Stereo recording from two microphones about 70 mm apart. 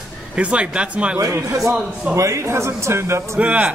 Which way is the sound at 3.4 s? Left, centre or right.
Centre.